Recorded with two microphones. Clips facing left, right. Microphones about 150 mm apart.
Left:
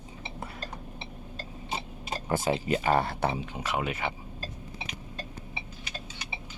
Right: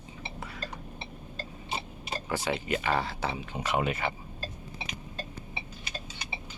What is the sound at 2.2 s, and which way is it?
Speech, 45° left (ahead or behind).